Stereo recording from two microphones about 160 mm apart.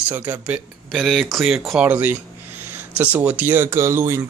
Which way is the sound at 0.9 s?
Centre (ahead or behind).